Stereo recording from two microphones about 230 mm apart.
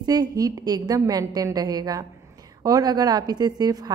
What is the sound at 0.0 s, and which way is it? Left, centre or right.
A woman's voice, centre.